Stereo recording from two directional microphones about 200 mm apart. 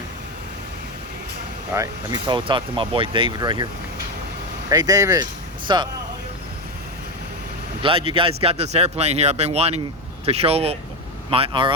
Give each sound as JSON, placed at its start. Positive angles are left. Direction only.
{"t": 1.7, "sound": "speech", "side_deg": -15}
{"t": 4.7, "sound": "speech", "side_deg": -20}
{"t": 7.8, "sound": "speech", "side_deg": -25}